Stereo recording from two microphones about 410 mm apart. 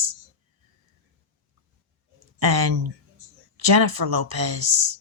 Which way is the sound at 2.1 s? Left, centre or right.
Right.